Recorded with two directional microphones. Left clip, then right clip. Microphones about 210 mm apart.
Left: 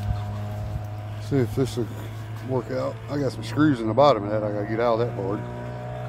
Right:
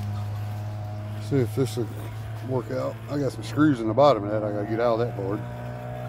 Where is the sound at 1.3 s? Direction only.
5° left (ahead or behind).